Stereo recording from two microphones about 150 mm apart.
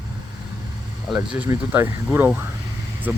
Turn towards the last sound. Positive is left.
turn(degrees=-15)  # may be behind; listen again after turning